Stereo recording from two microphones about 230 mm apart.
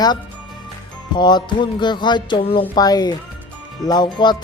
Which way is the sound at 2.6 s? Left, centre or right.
Centre.